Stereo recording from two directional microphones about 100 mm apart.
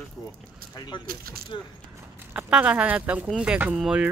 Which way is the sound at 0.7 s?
45° left (ahead or behind).